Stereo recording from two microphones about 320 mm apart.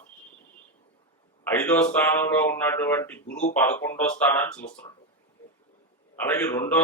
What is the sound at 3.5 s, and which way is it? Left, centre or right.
Speech, centre.